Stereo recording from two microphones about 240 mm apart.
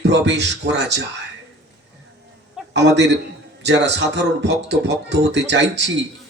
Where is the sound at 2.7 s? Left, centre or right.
Right.